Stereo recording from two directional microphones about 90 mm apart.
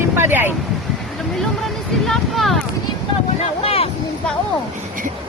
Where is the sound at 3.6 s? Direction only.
90° left.